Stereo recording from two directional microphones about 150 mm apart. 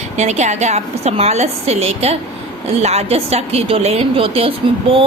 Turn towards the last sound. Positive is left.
turn(degrees=-40)  # may be behind; listen again after turning